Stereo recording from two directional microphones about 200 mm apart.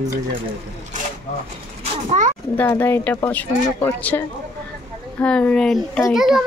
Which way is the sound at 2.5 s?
10° left (ahead or behind).